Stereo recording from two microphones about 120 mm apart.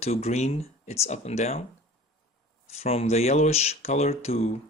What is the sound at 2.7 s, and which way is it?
Speech, 60° left (ahead or behind).